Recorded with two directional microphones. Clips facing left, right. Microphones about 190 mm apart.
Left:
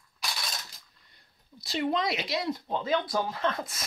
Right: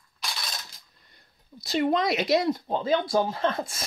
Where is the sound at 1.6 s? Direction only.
45° right (ahead or behind).